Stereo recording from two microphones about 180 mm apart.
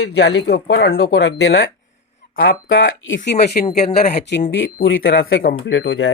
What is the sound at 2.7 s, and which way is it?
Speech, 90° left.